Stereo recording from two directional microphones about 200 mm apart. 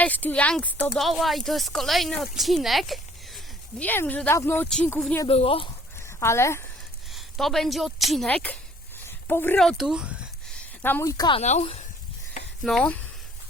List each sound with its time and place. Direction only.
0.0 s speech: 10° left (ahead or behind)
5.3 s speech: 30° left (ahead or behind)
6.1 s speech: 15° left (ahead or behind)
7.1 s speech: centre (ahead or behind)
9.0 s a sound: 10° left (ahead or behind)
10.8 s speech: 15° left (ahead or behind); by 11.9 s 30° left (ahead or behind)
12.6 s speech: 5° left (ahead or behind)